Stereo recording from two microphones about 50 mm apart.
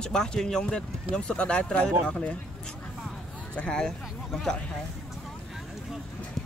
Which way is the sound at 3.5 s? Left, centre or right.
Left.